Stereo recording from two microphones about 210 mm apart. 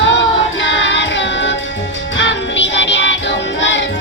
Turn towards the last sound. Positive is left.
turn(degrees=60)  # may be behind; listen again after turning